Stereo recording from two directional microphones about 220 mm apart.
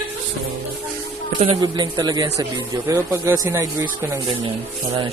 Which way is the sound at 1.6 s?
20° right (ahead or behind).